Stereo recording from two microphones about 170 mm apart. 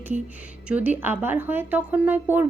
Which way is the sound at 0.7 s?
10° right (ahead or behind).